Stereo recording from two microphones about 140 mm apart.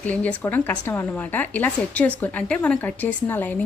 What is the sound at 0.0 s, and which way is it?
A woman's voice, 10° left (ahead or behind).